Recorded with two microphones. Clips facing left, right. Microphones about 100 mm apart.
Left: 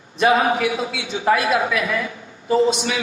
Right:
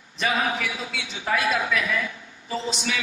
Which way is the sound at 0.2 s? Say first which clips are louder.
Left 8 dB; 50° left (ahead or behind).